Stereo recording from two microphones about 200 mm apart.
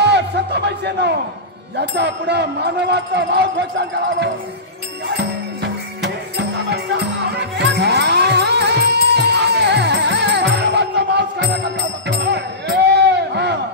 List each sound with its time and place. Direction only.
0.0 s music: 55° right (ahead or behind)
1.8 s speech: 60° right (ahead or behind)
5.0 s music: 55° right (ahead or behind)